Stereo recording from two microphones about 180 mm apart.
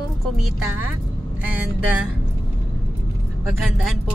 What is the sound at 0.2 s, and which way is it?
Speech, centre (ahead or behind).